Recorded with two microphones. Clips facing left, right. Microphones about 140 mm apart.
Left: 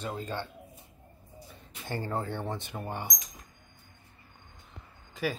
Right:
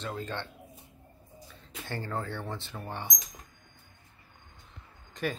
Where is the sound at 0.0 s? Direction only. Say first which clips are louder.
Left 1 dB; 10° left (ahead or behind).